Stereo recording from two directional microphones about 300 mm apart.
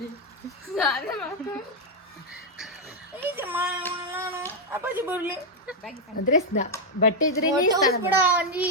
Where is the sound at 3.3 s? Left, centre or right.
Centre.